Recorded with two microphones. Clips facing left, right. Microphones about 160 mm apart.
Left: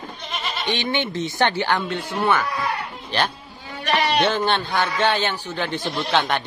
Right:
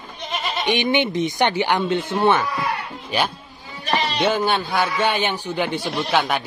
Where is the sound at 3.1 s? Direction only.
10° right (ahead or behind).